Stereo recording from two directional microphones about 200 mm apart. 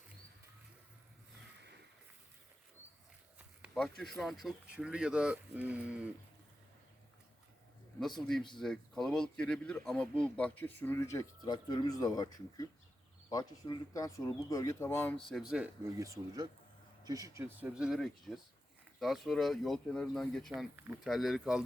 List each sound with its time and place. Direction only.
3.3 s speech: 5° right (ahead or behind)
8.5 s speech: centre (ahead or behind)